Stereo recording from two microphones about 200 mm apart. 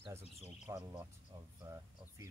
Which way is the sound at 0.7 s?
15° right (ahead or behind).